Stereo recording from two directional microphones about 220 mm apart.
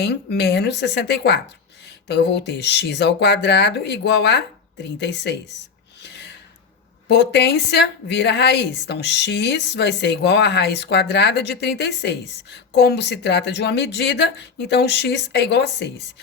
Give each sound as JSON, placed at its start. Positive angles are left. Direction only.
{"t": 0.0, "sound": "a woman's voice", "side_deg": 50}
{"t": 6.0, "sound": "gasp", "side_deg": 50}
{"t": 7.1, "sound": "a woman's voice", "side_deg": 50}